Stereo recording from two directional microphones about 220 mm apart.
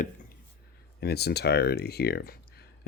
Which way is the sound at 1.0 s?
45° left (ahead or behind).